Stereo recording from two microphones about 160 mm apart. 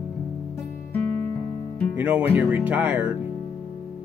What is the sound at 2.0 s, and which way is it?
Speech, 10° right (ahead or behind).